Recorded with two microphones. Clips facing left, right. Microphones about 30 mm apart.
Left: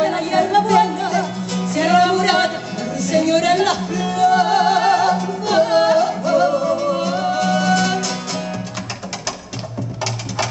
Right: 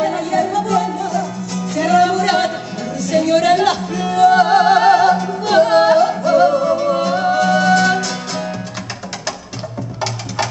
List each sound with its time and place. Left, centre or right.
0.0 s music: left
1.8 s music: centre